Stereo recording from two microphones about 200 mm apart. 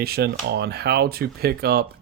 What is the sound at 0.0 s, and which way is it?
Speech, 50° right (ahead or behind).